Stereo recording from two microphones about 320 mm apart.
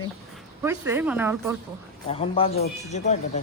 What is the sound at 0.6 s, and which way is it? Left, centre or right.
Speech, centre.